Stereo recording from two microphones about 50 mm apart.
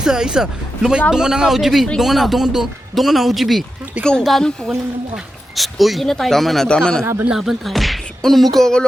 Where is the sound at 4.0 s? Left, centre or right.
Right.